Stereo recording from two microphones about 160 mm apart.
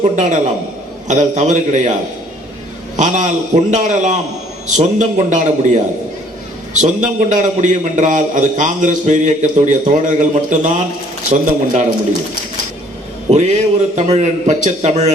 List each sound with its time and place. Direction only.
0.0 s a man's voice: 50° right (ahead or behind)
2.9 s a man's voice: 50° right (ahead or behind)
6.8 s a man's voice: 50° right (ahead or behind)
13.3 s a man's voice: 45° right (ahead or behind)